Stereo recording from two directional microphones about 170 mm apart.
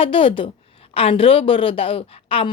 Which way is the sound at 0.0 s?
30° left (ahead or behind).